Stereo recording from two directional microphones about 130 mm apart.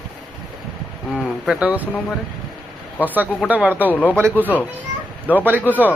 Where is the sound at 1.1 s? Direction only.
10° left (ahead or behind).